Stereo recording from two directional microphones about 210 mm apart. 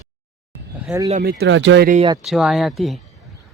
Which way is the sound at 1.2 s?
50° right (ahead or behind).